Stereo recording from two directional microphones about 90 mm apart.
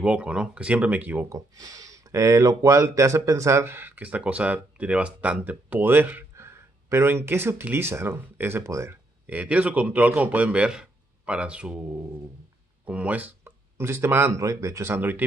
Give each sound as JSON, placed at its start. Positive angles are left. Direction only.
{"t": 0.0, "sound": "a man's voice", "side_deg": -15}
{"t": 1.3, "sound": "speech", "side_deg": -45}
{"t": 9.2, "sound": "a man's voice", "side_deg": -15}
{"t": 12.8, "sound": "speech", "side_deg": -15}
{"t": 13.7, "sound": "speech", "side_deg": -30}